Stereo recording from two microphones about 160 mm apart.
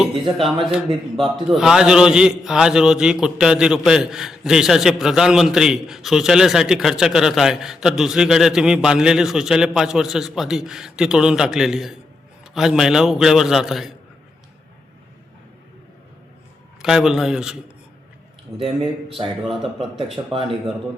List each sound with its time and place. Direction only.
0.0 s a man's voice: centre (ahead or behind)
16.8 s a man's voice: 5° right (ahead or behind)
19.0 s speech: 35° right (ahead or behind)